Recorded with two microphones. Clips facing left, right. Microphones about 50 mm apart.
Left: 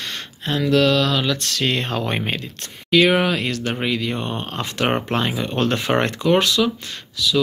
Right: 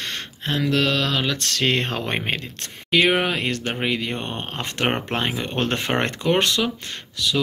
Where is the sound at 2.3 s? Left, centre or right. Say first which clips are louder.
Even; right.